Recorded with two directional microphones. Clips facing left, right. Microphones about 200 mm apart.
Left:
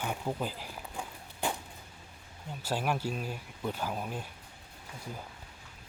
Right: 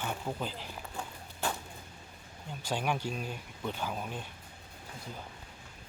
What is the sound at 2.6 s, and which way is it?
Speech, 5° left (ahead or behind).